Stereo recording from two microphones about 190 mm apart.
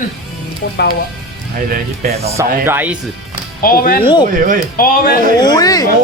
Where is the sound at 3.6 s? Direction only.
50° left (ahead or behind).